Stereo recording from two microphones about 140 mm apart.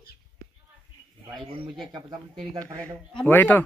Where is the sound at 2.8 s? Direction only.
10° left (ahead or behind).